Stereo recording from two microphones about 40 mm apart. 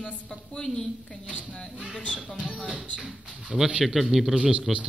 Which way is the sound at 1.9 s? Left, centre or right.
Left.